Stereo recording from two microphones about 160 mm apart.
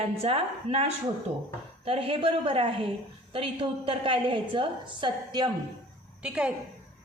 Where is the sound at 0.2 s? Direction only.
40° right (ahead or behind).